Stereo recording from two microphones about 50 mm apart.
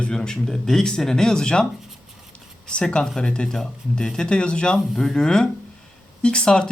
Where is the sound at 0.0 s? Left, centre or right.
Centre.